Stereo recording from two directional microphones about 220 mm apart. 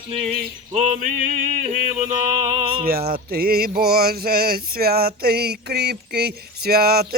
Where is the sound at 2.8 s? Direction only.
45° right (ahead or behind).